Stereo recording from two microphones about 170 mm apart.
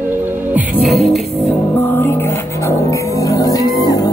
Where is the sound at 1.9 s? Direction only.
15° left (ahead or behind).